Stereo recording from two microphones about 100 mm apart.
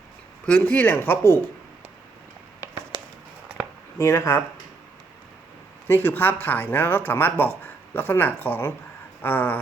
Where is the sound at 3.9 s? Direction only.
30° left (ahead or behind).